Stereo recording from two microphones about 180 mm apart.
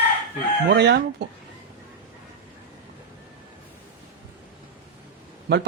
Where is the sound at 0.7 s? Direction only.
65° right (ahead or behind).